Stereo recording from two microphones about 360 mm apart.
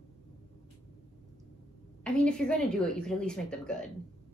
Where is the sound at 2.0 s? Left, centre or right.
Centre.